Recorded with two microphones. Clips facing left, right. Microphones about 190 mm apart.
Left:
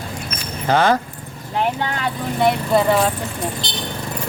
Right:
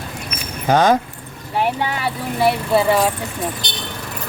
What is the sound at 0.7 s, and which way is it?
Speech, 15° right (ahead or behind).